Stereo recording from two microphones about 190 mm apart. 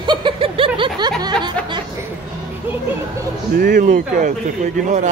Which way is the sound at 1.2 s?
25° right (ahead or behind).